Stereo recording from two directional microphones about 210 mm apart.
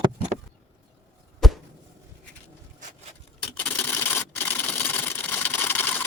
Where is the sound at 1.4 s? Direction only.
Centre (ahead or behind).